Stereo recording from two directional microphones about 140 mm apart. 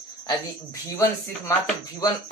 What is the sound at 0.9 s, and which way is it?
Speech, 25° left (ahead or behind).